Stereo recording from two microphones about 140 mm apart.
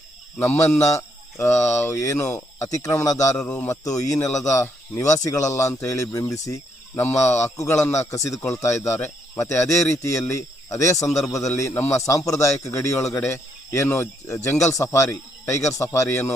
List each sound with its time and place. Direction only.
0.3 s a man's voice: 15° left (ahead or behind)
3.3 s speech: 10° left (ahead or behind)
3.7 s a man's voice: 25° left (ahead or behind)
6.4 s cricket: 25° left (ahead or behind)
7.0 s a man's voice: 20° left (ahead or behind)
10.9 s speech: 55° left (ahead or behind)
11.2 s a man's voice: 20° left (ahead or behind)